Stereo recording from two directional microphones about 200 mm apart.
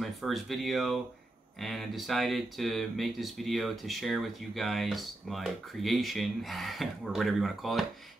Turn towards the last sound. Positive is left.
turn(degrees=0)  # may be behind; listen again after turning